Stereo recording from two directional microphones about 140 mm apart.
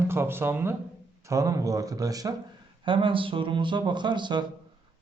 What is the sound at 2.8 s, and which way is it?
Speech, 35° right (ahead or behind).